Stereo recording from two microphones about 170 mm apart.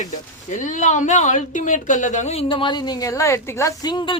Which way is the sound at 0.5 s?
45° left (ahead or behind).